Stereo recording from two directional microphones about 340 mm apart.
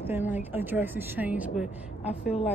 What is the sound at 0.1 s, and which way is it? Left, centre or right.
Speech, centre.